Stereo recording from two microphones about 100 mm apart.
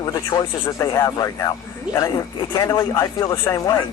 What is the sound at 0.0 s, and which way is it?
Speech, 40° left (ahead or behind).